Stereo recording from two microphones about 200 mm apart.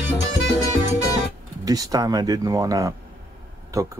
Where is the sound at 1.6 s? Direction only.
20° right (ahead or behind).